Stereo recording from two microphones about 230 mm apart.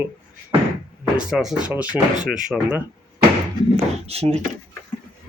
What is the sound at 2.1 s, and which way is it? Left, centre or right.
Speech, right.